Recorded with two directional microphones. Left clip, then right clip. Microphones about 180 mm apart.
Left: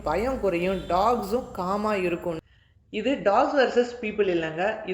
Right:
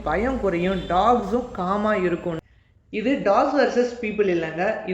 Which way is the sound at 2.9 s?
45° left (ahead or behind).